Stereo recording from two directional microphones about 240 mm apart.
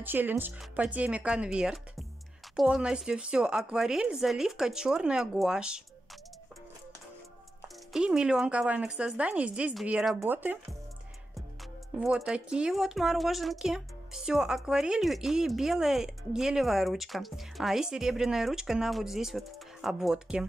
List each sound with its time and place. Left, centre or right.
0.0 s speech: centre
7.6 s speech: centre
12.3 s speech: centre